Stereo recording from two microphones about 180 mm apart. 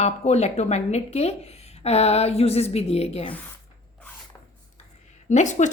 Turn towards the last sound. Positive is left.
turn(degrees=40)  # may be behind; listen again after turning